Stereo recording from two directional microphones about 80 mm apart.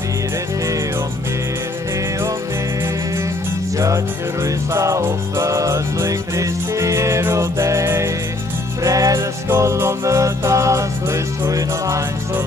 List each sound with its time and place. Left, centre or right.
3.7 s music: right
8.8 s music: right